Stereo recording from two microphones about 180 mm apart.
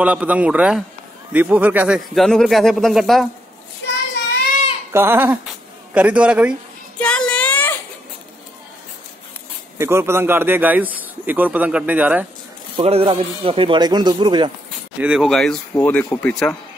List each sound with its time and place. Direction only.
0.0 s a man's voice: 10° right (ahead or behind)
2.1 s speech: centre (ahead or behind)
3.8 s child singing: 75° left (ahead or behind)
4.9 s a man's voice: 10° right (ahead or behind)
7.0 s a sound: 5° left (ahead or behind)
9.8 s a man's voice: 15° right (ahead or behind)
12.7 s speech: 30° right (ahead or behind)
15.0 s speech: 5° right (ahead or behind)